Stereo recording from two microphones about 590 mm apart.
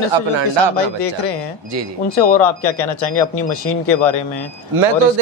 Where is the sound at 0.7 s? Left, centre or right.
Left.